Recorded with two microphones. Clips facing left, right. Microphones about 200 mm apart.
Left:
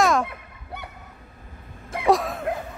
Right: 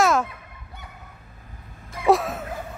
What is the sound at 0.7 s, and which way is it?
Fowl, 70° left (ahead or behind).